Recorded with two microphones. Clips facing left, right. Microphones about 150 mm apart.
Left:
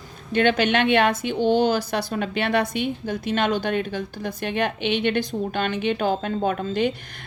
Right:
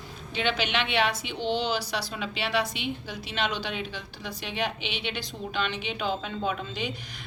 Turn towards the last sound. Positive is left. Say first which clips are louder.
# left 10 dB
turn(degrees=55)  # may be behind; listen again after turning